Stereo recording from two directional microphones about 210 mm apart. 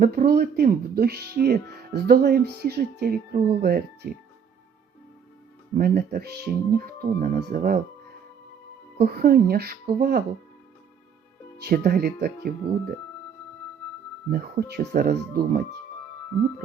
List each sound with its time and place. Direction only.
0.0 s speech: 45° right (ahead or behind)
5.7 s speech: 45° right (ahead or behind)
9.0 s speech: 45° right (ahead or behind)
11.6 s speech: 45° right (ahead or behind)
14.3 s speech: 45° right (ahead or behind)